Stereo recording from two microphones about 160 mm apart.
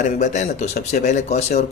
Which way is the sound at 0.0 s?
50° left (ahead or behind).